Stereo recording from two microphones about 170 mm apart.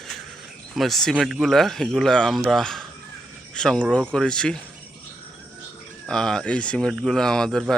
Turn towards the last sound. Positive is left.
turn(degrees=5)  # may be behind; listen again after turning